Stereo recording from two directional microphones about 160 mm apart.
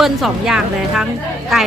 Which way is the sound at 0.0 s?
Centre (ahead or behind).